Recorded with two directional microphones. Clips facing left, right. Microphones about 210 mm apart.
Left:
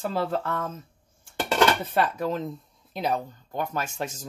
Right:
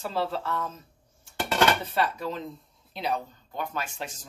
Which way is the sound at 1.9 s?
50° left (ahead or behind).